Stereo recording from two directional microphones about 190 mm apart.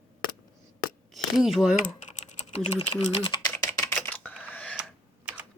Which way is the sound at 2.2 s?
35° left (ahead or behind).